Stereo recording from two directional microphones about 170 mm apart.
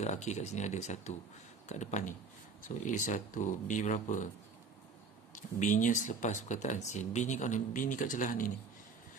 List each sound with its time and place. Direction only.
0.0 s speech: 45° left (ahead or behind)
5.3 s speech: 50° left (ahead or behind)